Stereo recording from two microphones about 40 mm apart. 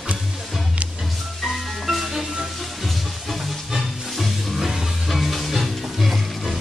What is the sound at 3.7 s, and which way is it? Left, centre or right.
Music, centre.